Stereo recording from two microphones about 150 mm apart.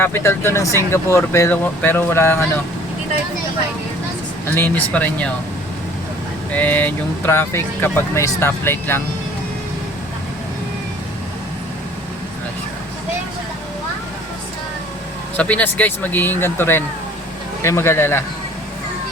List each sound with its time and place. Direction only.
0.0 s speech: 15° left (ahead or behind)
4.4 s speech: 10° left (ahead or behind)
6.5 s speech: 10° left (ahead or behind)
15.4 s speech: 10° left (ahead or behind)